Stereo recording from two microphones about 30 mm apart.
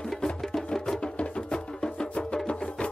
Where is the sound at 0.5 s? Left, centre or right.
Centre.